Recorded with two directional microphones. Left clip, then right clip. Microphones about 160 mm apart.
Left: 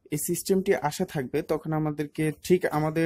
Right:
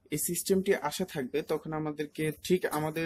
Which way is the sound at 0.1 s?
40° left (ahead or behind).